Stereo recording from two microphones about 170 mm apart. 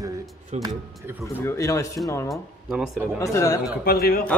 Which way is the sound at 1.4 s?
20° left (ahead or behind).